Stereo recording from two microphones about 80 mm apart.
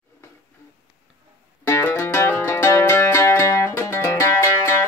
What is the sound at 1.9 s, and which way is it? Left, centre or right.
Music, left.